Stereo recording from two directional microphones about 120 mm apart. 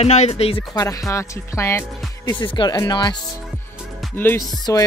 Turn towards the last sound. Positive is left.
turn(degrees=25)  # may be behind; listen again after turning